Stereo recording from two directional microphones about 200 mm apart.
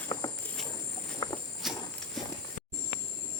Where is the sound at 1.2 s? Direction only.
20° left (ahead or behind).